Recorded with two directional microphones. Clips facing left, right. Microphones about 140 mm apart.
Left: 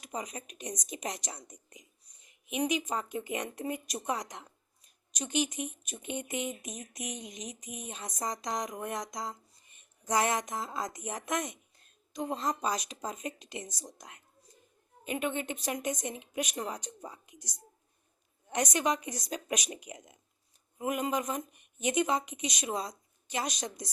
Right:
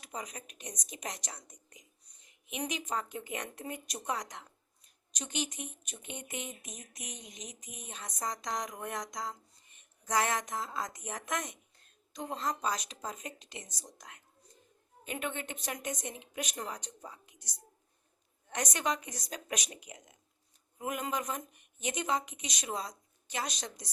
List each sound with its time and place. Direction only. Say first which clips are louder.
0.0 s speech: left 4 dB; 15° left (ahead or behind)